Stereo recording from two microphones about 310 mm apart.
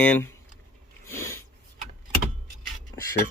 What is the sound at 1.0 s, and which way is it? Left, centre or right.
Snort, centre.